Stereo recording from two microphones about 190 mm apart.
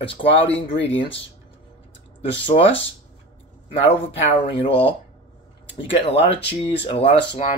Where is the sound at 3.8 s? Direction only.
30° left (ahead or behind).